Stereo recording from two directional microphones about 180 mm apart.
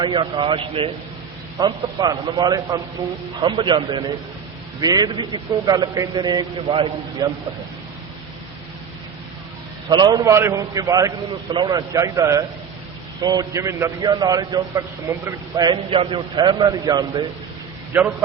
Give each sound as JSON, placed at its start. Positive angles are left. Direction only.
{"t": 0.0, "sound": "a man's voice", "side_deg": -25}
{"t": 9.9, "sound": "a man's voice", "side_deg": -25}